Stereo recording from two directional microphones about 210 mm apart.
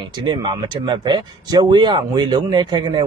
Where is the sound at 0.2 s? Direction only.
20° right (ahead or behind).